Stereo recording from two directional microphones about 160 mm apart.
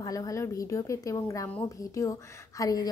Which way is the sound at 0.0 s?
20° left (ahead or behind).